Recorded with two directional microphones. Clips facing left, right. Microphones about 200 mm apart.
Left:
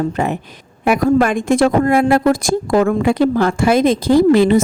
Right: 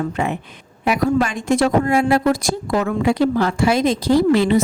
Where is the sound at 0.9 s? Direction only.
55° left (ahead or behind).